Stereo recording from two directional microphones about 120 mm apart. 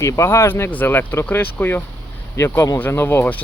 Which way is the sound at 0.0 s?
25° left (ahead or behind).